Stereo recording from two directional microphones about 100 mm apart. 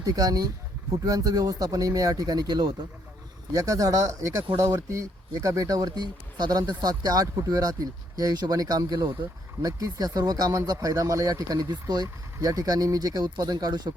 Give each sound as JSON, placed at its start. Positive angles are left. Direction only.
{"t": 0.0, "sound": "speech", "side_deg": -40}
{"t": 3.5, "sound": "speech", "side_deg": -35}